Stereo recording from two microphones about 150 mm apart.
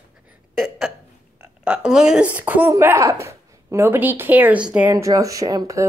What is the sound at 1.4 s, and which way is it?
Speech, 10° right (ahead or behind).